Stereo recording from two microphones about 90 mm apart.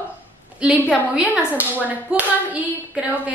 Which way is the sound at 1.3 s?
15° right (ahead or behind).